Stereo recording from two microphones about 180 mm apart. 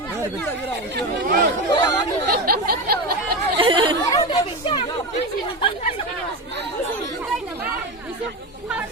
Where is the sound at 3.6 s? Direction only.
25° right (ahead or behind).